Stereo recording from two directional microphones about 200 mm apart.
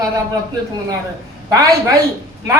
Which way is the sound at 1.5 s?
15° right (ahead or behind).